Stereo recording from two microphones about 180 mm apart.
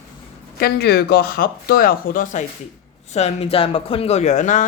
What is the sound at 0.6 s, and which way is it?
Speech, 65° left (ahead or behind).